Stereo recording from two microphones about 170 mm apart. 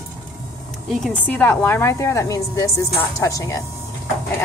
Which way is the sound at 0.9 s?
5° left (ahead or behind).